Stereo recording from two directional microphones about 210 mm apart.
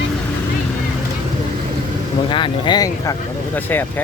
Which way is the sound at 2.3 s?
20° left (ahead or behind).